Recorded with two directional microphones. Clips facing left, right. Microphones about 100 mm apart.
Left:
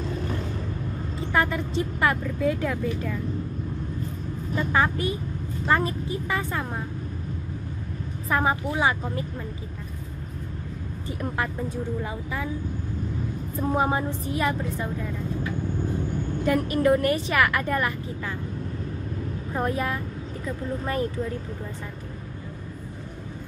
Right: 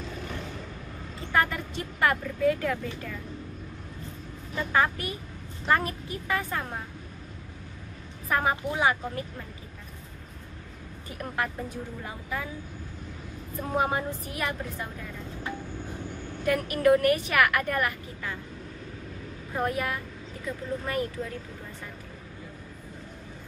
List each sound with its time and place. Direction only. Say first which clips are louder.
1.3 s a woman's voice: left 2 dB; 20° left (ahead or behind)
4.7 s a woman's voice: left 1 dB; 25° left (ahead or behind)
8.3 s a woman's voice: left 2 dB; 20° left (ahead or behind)
11.1 s a woman's voice: left 3 dB; 25° left (ahead or behind)
13.7 s a woman's voice: left 1 dB; 25° left (ahead or behind)
16.4 s a woman's voice: left 1 dB; 30° left (ahead or behind)
19.5 s a woman's voice: left 2 dB; 25° left (ahead or behind)